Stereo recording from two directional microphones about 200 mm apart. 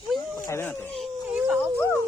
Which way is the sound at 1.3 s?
5° right (ahead or behind).